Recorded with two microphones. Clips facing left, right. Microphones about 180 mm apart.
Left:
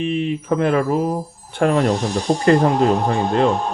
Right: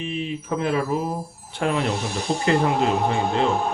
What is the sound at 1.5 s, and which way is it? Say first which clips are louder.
Speech: left 7 dB; 45° left (ahead or behind).